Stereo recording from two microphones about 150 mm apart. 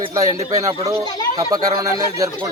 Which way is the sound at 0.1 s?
20° right (ahead or behind).